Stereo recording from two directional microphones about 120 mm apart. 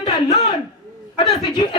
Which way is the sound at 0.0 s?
50° left (ahead or behind).